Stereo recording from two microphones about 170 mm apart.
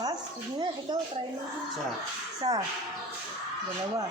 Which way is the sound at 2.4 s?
30° right (ahead or behind).